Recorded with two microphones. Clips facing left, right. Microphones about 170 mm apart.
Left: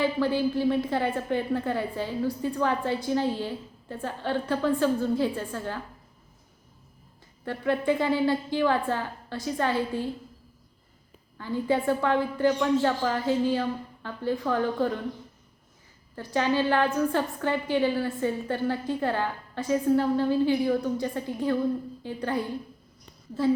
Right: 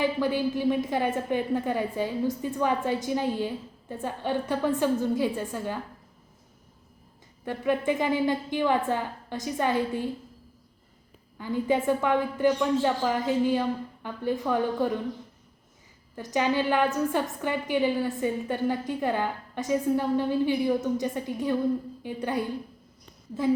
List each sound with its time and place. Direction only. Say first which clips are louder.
0.0 s a woman's voice: left 1 dB; 15° right (ahead or behind)
7.4 s a woman's voice: even; 15° right (ahead or behind)
11.3 s a woman's voice: right 1 dB; 15° right (ahead or behind)
16.3 s a woman's voice: even; 15° right (ahead or behind)